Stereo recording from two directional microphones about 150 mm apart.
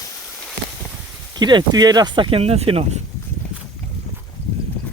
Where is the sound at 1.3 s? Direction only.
30° right (ahead or behind).